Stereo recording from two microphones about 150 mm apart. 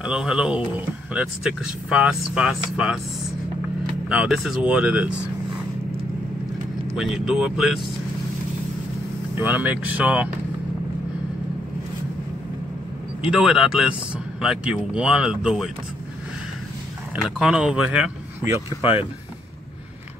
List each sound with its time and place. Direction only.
0.0 s speech: 5° right (ahead or behind)
4.1 s speech: 5° right (ahead or behind)
7.0 s speech: 5° right (ahead or behind)
9.4 s speech: 10° right (ahead or behind)
13.3 s speech: 5° right (ahead or behind)
17.1 s speech: 5° right (ahead or behind)
18.8 s speech: 40° left (ahead or behind)